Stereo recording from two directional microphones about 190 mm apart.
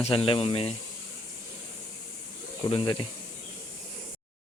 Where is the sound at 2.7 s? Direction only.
25° left (ahead or behind).